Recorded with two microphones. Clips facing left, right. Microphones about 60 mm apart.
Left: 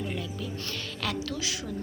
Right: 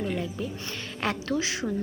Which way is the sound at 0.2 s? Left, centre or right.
Right.